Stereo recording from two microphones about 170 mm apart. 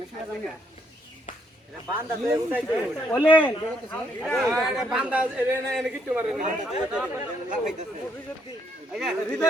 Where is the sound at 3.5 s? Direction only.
5° left (ahead or behind).